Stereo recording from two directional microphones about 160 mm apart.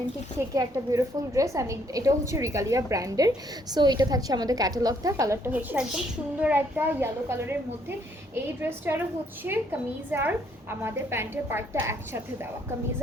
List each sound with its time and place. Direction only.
0.3 s a woman's voice: 20° right (ahead or behind)